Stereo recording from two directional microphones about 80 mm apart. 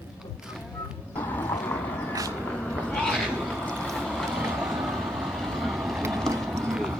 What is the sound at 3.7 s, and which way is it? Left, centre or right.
Vehicle, centre.